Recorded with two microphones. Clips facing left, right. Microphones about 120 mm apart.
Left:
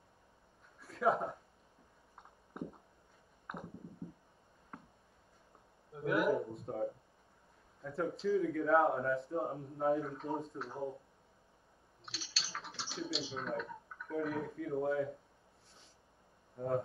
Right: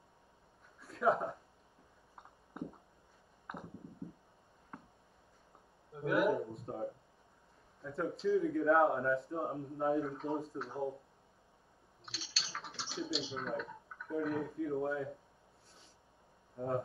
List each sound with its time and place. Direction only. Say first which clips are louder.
0.7 s a sound: right 1 dB; centre (ahead or behind)
5.9 s speech: right 1 dB; centre (ahead or behind)
7.9 s speech: right 1 dB; centre (ahead or behind)
12.0 s typing: even; centre (ahead or behind)
14.8 s speech: left 5 dB; centre (ahead or behind)
16.5 s speech: left 1 dB; centre (ahead or behind)